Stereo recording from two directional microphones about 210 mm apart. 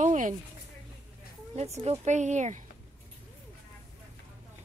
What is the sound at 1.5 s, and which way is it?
Speech, 30° right (ahead or behind).